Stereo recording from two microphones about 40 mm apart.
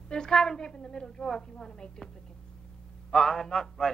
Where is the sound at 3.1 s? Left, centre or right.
Centre.